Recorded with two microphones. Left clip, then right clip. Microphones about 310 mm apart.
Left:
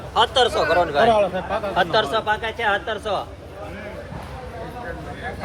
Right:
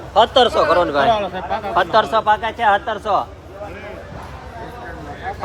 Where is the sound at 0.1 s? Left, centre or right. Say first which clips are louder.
Right 5 dB; right.